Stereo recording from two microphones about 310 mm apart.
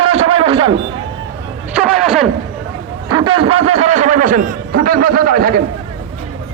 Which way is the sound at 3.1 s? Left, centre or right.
Centre.